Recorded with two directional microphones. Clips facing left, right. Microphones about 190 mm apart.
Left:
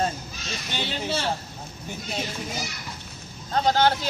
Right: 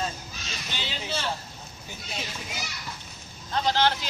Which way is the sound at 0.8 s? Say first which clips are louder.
Left 7 dB; 55° left (ahead or behind).